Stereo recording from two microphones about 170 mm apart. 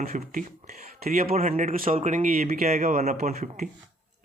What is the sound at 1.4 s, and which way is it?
Speech, 45° right (ahead or behind).